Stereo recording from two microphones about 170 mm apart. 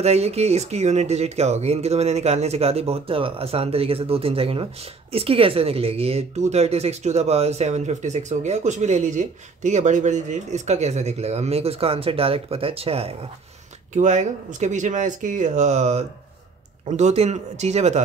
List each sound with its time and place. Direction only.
0.0 s speech: 35° right (ahead or behind)